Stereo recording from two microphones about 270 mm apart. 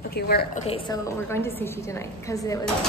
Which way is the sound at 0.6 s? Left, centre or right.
Centre.